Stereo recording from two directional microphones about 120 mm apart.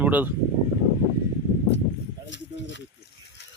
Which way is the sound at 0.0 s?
15° right (ahead or behind).